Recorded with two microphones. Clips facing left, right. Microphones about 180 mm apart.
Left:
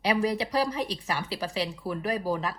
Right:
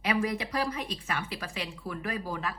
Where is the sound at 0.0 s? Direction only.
35° left (ahead or behind).